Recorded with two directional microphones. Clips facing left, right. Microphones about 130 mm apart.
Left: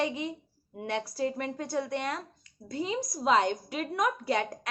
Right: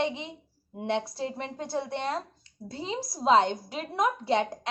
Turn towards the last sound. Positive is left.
turn(degrees=-25)  # may be behind; listen again after turning